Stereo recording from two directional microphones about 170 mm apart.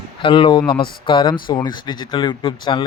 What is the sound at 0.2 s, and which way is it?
Speech, 30° left (ahead or behind).